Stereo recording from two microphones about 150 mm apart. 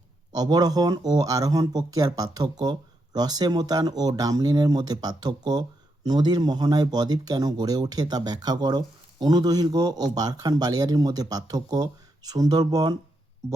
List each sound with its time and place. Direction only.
0.3 s speech: 25° right (ahead or behind)